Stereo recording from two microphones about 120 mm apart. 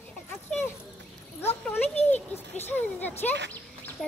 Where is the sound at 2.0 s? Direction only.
55° left (ahead or behind).